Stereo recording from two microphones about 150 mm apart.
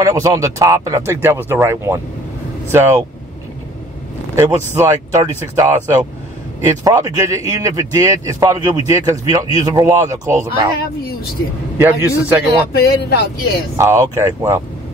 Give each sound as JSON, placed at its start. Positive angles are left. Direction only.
{"t": 0.0, "sound": "a man's voice", "side_deg": -20}
{"t": 4.4, "sound": "speech", "side_deg": -20}
{"t": 11.8, "sound": "a man's voice", "side_deg": -15}
{"t": 12.7, "sound": "speech", "side_deg": 90}
{"t": 13.7, "sound": "speech", "side_deg": -20}